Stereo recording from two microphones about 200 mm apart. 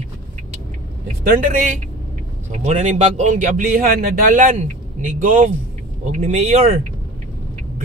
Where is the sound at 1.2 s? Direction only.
45° right (ahead or behind).